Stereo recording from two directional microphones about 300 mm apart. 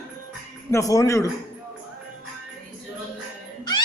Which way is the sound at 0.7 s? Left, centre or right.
Centre.